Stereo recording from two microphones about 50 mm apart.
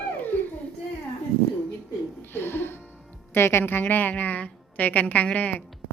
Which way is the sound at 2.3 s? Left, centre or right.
Left.